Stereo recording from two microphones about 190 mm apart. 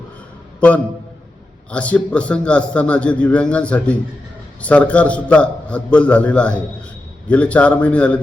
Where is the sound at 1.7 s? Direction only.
5° left (ahead or behind).